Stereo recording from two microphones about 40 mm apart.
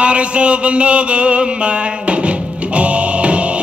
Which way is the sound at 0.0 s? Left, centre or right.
Right.